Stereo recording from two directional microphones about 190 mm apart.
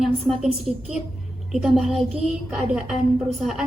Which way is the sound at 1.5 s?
Centre (ahead or behind).